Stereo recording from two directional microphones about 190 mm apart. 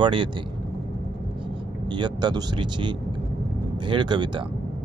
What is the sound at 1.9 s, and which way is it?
Speech, 25° right (ahead or behind).